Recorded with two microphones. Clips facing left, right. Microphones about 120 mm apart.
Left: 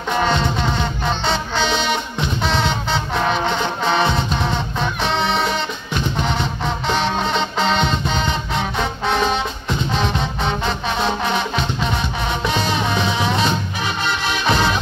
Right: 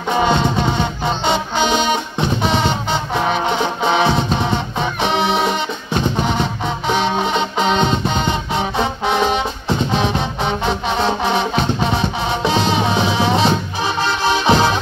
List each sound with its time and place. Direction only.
0.1 s music: 10° right (ahead or behind)
6.9 s music: 10° right (ahead or behind)
12.4 s music: 20° right (ahead or behind)